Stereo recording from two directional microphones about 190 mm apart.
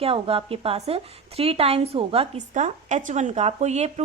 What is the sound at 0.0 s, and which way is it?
Speech, 30° right (ahead or behind).